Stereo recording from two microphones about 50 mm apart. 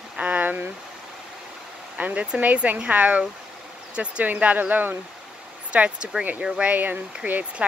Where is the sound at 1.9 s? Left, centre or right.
Right.